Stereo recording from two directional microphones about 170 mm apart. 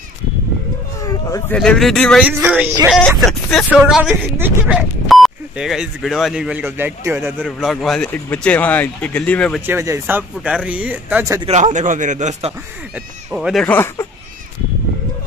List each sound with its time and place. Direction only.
1.5 s speech: 5° left (ahead or behind)
2.2 s speech: 10° right (ahead or behind)
7.4 s speech: centre (ahead or behind)
9.7 s speech: 15° right (ahead or behind)
11.4 s speech: 40° right (ahead or behind)
12.9 s speech: 5° right (ahead or behind)
13.7 s speech: 15° left (ahead or behind)